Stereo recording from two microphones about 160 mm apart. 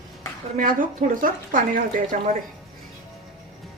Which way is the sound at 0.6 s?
60° right (ahead or behind).